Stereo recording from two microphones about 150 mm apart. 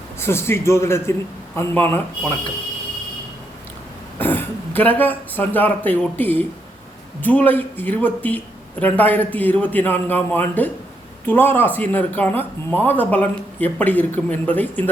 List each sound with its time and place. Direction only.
0.2 s speech: 15° left (ahead or behind)
4.2 s speech: 15° left (ahead or behind)